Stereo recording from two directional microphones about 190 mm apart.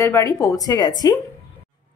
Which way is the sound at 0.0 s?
15° left (ahead or behind).